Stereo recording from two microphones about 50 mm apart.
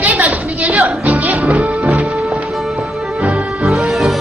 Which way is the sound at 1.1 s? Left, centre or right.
Right.